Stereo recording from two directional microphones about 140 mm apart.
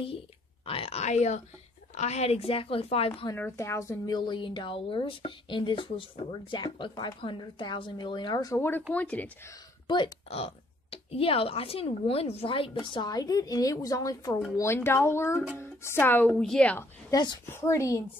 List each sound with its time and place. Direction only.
0.7 s a woman's voice: 45° left (ahead or behind)
3.3 s a woman's voice: 15° left (ahead or behind)
8.5 s a woman's voice: 15° left (ahead or behind)
9.8 s speech: 30° left (ahead or behind)
10.3 s a woman's voice: 45° left (ahead or behind); by 16.8 s 10° left (ahead or behind)
17.1 s a woman's voice: 30° left (ahead or behind)
17.5 s a woman's voice: 20° left (ahead or behind)